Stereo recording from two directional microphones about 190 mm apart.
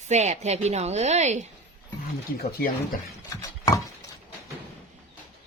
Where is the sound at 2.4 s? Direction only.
50° left (ahead or behind).